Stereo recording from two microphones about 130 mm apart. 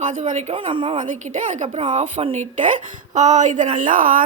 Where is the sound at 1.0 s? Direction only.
70° right (ahead or behind).